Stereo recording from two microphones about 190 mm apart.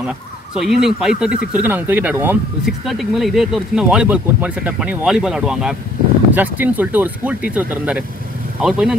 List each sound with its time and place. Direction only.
0.6 s speech: centre (ahead or behind)